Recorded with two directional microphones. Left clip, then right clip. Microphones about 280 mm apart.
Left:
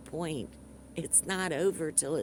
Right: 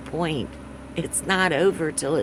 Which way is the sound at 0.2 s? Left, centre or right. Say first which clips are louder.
Right 10 dB; left.